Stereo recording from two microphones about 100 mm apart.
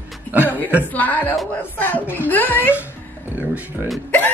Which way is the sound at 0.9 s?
15° left (ahead or behind).